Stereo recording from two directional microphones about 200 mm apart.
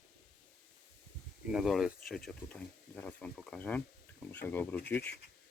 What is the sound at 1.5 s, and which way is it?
Speech, centre (ahead or behind).